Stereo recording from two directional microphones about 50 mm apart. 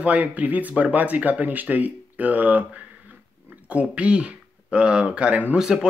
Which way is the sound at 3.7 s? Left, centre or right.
Right.